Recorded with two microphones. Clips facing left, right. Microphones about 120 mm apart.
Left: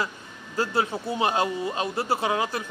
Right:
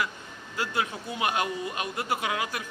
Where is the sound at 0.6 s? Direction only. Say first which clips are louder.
Left 5 dB; 35° left (ahead or behind).